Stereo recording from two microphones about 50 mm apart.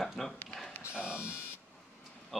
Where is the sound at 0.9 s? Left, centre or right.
Right.